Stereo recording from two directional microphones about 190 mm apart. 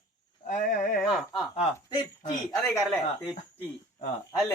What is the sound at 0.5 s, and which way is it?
Speech, 45° left (ahead or behind).